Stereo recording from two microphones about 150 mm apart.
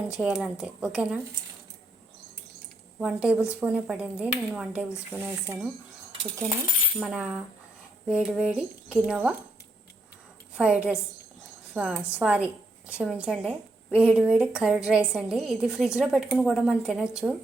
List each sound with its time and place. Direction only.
0.2 s a woman's voice: 5° right (ahead or behind)
3.0 s speech: 10° right (ahead or behind)
7.0 s a woman's voice: 5° right (ahead or behind)
10.6 s a woman's voice: 10° right (ahead or behind)